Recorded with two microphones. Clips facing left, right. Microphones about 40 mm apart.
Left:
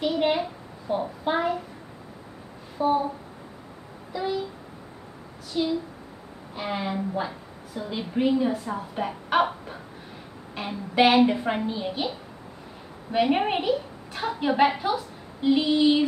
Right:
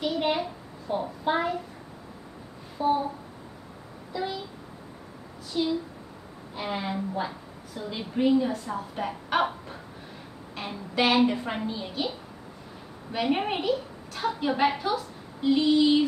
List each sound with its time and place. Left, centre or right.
0.0 s child singing: centre
2.8 s a sound: centre
4.1 s a child's voice: centre
5.5 s a woman's voice: centre
13.1 s a woman's voice: centre